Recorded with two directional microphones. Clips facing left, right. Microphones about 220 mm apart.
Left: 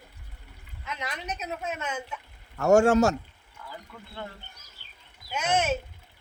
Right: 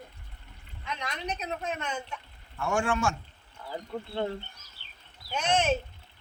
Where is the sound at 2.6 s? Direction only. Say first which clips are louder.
Left 10 dB; 45° left (ahead or behind).